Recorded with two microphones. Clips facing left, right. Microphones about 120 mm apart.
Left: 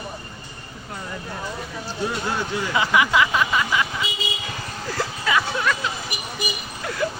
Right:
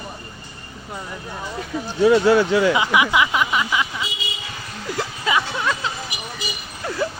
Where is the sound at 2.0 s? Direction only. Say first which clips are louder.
Right 12 dB; 90° right.